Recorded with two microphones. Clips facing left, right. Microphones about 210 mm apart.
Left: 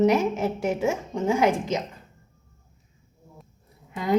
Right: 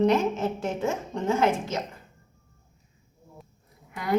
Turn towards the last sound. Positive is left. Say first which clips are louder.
# left 3 dB
turn(degrees=20)  # may be behind; listen again after turning